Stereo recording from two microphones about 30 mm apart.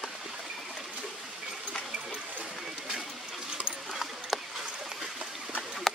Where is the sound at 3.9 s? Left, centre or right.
Centre.